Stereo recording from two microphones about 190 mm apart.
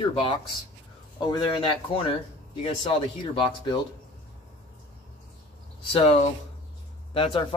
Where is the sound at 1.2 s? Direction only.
25° left (ahead or behind).